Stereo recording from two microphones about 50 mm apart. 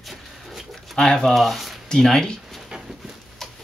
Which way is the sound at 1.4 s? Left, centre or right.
Centre.